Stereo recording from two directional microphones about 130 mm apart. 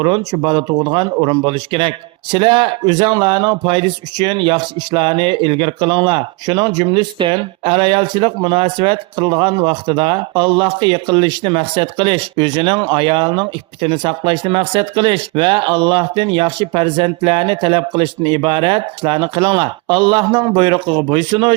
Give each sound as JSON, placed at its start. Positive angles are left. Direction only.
{"t": 0.0, "sound": "speech", "side_deg": -35}